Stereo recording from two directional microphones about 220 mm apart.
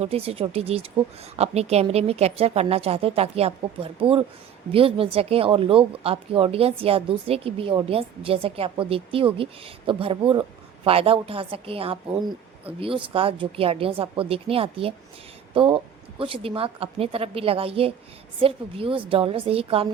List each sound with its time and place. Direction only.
0.0 s speech: 25° right (ahead or behind)